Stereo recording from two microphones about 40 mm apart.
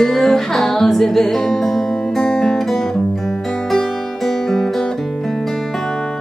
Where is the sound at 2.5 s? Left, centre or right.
Centre.